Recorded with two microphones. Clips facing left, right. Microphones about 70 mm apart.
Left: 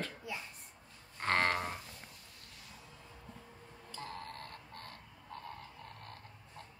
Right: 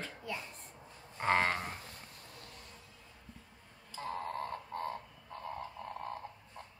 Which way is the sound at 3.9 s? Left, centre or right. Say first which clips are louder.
Right 6 dB; centre.